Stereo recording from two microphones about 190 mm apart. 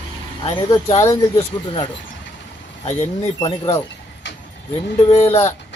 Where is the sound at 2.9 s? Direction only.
30° left (ahead or behind).